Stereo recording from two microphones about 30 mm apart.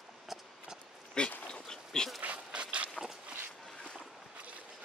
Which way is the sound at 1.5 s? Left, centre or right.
Left.